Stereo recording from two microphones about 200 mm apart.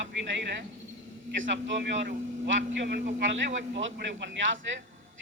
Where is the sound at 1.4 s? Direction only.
70° right (ahead or behind).